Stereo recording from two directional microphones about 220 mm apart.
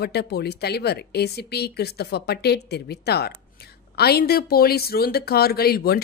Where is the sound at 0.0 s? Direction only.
45° left (ahead or behind).